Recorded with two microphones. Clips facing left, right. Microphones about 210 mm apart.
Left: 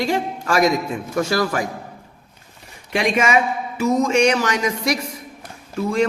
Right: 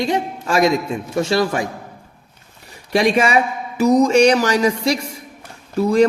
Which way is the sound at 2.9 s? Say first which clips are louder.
Right 3 dB; 35° right (ahead or behind).